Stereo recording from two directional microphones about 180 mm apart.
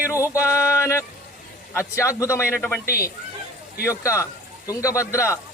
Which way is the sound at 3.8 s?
15° left (ahead or behind).